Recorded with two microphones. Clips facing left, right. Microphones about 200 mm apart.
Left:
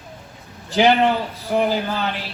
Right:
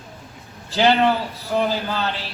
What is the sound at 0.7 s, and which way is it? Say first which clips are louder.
A man's voice: left 1 dB; 15° left (ahead or behind).